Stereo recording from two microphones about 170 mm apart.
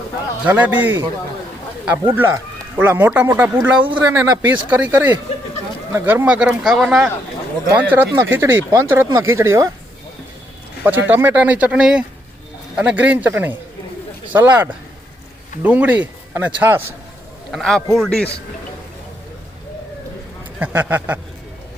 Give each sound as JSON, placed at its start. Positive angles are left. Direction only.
{"t": 0.4, "sound": "speech", "side_deg": -10}
{"t": 11.0, "sound": "speech", "side_deg": -10}
{"t": 17.5, "sound": "speech", "side_deg": 5}
{"t": 20.6, "sound": "speech", "side_deg": -10}